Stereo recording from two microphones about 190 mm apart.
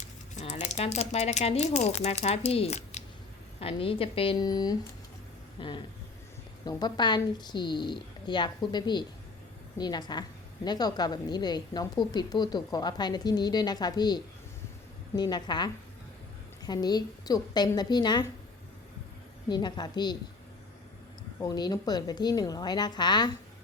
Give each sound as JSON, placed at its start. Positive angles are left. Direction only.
{"t": 0.3, "sound": "a woman's voice", "side_deg": 35}
{"t": 19.5, "sound": "a woman's voice", "side_deg": 25}
{"t": 21.3, "sound": "a woman's voice", "side_deg": 20}